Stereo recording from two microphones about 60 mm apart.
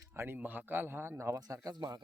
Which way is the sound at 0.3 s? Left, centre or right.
Right.